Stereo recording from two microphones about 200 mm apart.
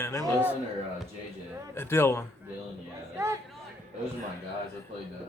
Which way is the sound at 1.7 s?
10° left (ahead or behind).